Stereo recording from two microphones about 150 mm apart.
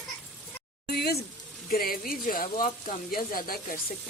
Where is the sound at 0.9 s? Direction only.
90° left.